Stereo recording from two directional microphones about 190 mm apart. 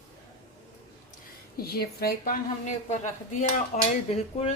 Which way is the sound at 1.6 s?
55° left (ahead or behind).